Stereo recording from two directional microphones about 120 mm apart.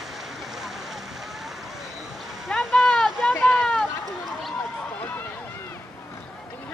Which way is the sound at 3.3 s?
15° left (ahead or behind).